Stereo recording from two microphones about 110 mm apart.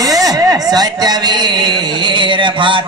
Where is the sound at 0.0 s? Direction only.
35° right (ahead or behind).